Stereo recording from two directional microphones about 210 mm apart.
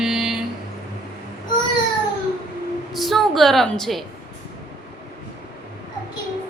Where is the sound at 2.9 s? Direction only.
Centre (ahead or behind).